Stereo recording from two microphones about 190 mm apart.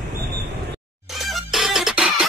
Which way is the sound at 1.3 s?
Centre (ahead or behind).